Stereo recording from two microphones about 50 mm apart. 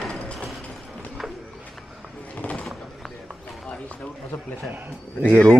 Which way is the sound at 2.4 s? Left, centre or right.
Left.